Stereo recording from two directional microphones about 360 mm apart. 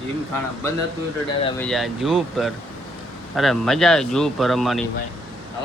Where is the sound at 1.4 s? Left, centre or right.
Centre.